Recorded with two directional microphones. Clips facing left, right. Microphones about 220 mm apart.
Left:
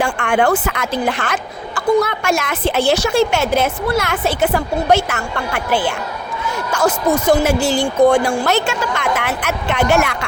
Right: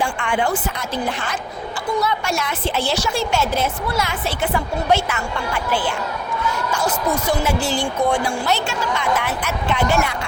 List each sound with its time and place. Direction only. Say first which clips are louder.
0.0 s a woman's voice: left 5 dB; 70° left (ahead or behind); by 1.4 s 85° left
1.7 s a sound: left 7 dB; 50° left (ahead or behind)
2.2 s a woman's voice: left 5 dB; 90° left; by 5.2 s 45° left (ahead or behind)
7.1 s speech: left 7 dB; 45° left (ahead or behind)
9.0 s a woman's voice: left 2 dB; 80° left